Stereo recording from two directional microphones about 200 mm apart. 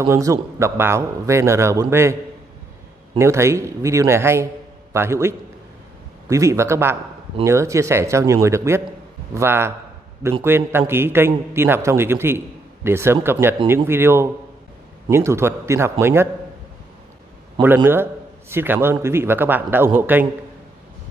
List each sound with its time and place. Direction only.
0.0 s a man's voice: 15° right (ahead or behind)
3.2 s a man's voice: 15° right (ahead or behind)
17.6 s a man's voice: 25° right (ahead or behind)
18.5 s a man's voice: 10° right (ahead or behind)